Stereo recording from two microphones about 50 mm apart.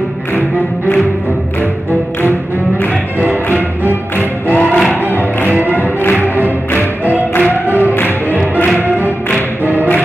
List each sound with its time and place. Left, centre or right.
3.5 s music: right
4.5 s music: left
5.5 s music: right
5.8 s music: left
6.2 s music: right
7.7 s music: left